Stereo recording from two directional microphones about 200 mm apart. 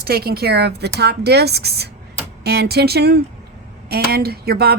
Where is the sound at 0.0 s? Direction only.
50° right (ahead or behind).